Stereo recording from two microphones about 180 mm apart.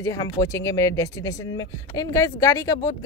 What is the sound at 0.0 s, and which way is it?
Speech, 20° left (ahead or behind).